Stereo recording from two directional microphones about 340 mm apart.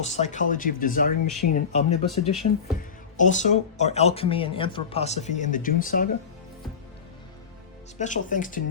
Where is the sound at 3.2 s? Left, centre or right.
Left.